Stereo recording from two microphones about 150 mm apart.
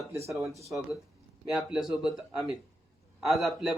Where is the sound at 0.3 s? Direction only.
20° right (ahead or behind).